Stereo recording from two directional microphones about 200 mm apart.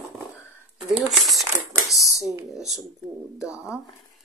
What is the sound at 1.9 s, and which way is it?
Speech, 15° left (ahead or behind).